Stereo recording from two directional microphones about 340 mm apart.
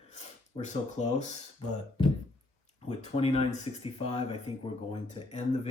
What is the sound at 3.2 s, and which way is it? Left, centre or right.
Speech, centre.